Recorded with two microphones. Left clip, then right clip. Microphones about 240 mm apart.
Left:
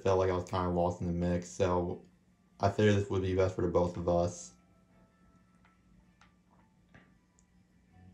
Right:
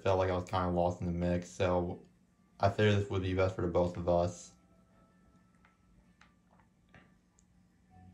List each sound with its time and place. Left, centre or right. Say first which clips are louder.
0.0 s speech: left 2 dB; centre